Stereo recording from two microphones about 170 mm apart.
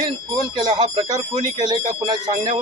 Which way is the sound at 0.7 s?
25° right (ahead or behind).